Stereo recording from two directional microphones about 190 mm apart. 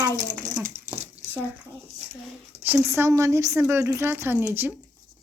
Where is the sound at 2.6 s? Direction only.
10° right (ahead or behind).